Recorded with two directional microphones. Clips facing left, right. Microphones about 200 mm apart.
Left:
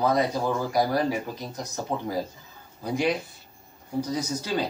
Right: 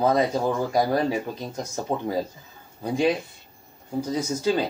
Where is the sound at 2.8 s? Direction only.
25° right (ahead or behind).